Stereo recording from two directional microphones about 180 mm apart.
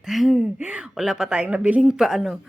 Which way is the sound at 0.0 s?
Centre (ahead or behind).